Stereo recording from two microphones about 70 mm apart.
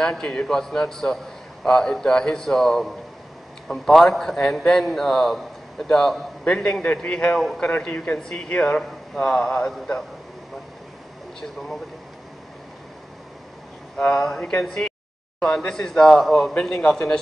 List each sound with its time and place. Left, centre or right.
0.0 s a man's voice: centre
7.3 s a man's voice: centre
7.6 s a man's voice: left
13.9 s a man's voice: centre
16.5 s a man's voice: centre